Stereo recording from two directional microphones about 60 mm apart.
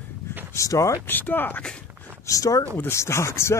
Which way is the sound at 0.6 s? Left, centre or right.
Left.